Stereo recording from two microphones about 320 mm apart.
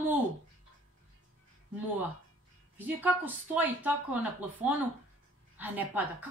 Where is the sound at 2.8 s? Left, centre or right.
Centre.